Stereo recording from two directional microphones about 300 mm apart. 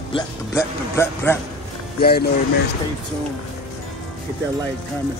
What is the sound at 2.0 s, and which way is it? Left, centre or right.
Speech, left.